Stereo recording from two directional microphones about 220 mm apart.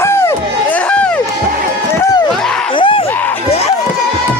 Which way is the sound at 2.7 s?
25° left (ahead or behind).